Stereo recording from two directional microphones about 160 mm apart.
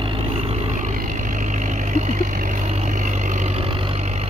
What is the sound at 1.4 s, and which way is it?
Vehicle, 50° right (ahead or behind).